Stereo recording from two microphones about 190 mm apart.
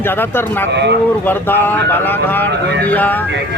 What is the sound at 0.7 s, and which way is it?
Speech, 65° right (ahead or behind).